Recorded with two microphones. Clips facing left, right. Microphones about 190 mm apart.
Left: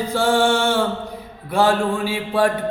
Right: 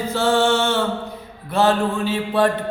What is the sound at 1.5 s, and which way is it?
Mantra, 10° left (ahead or behind).